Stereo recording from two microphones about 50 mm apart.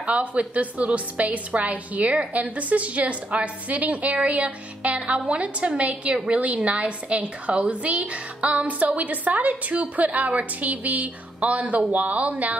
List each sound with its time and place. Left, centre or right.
0.0 s a woman's voice: right